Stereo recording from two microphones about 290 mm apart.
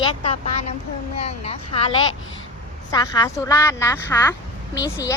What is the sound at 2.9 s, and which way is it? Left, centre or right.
A woman's voice, centre.